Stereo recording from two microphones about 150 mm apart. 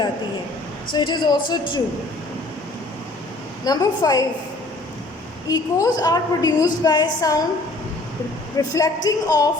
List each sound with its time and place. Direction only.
0.9 s speech: 30° left (ahead or behind)
3.7 s a woman's voice: 25° left (ahead or behind)
5.5 s a woman's voice: 25° left (ahead or behind)
8.5 s a woman's voice: 25° left (ahead or behind)